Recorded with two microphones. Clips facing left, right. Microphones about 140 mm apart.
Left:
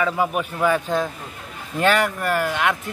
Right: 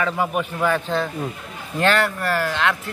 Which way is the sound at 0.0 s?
5° left (ahead or behind).